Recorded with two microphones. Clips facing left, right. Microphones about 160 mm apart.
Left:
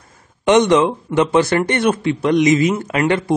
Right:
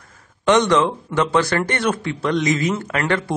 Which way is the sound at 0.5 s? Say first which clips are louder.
Left 3 dB; 20° left (ahead or behind).